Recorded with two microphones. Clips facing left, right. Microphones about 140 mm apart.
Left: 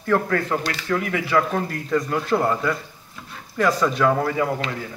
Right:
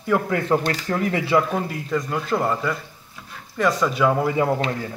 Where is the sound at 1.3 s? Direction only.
5° right (ahead or behind).